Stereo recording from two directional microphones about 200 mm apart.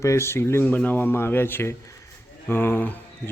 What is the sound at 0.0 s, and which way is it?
Speech, 15° left (ahead or behind).